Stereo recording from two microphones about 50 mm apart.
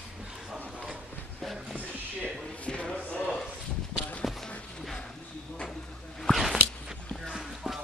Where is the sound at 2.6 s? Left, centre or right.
Left.